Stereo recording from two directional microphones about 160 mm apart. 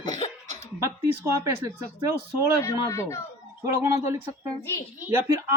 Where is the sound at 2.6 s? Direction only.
20° left (ahead or behind).